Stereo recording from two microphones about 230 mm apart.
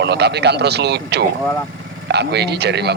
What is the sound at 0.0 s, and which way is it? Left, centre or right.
A man's voice, right.